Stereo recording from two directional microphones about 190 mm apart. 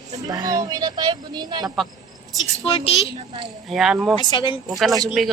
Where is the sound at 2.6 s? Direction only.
30° left (ahead or behind).